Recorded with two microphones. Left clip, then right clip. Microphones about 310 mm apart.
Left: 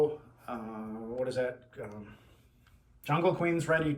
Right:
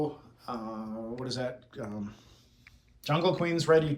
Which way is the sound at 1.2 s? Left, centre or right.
Centre.